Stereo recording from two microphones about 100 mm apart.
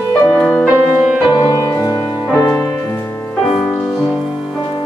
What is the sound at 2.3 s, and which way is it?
Music, 25° left (ahead or behind).